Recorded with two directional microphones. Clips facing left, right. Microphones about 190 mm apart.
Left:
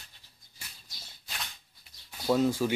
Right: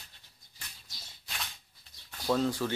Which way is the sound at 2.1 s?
10° left (ahead or behind).